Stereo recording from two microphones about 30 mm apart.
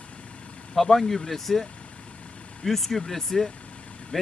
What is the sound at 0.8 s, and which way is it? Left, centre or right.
Speech, centre.